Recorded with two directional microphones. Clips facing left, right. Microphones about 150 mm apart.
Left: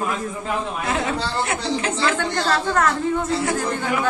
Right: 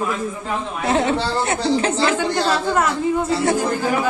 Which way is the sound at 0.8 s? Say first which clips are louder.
Right 9 dB; 30° right (ahead or behind).